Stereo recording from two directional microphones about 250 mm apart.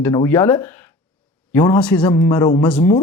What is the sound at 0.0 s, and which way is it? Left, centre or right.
A woman's voice, centre.